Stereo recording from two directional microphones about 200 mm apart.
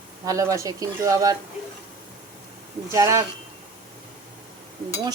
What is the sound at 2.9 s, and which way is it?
Speech, 15° right (ahead or behind).